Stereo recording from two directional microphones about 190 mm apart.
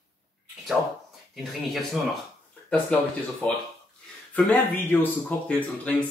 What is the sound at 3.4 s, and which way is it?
Speech, 5° left (ahead or behind).